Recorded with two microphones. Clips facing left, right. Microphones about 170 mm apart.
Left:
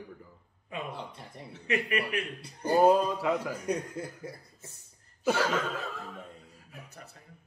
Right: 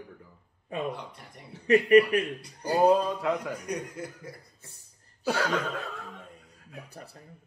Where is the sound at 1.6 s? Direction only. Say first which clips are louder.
Right 12 dB; 35° right (ahead or behind).